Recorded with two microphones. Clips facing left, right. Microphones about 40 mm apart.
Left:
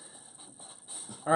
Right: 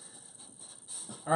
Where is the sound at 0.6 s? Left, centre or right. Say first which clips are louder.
Left 3 dB; left.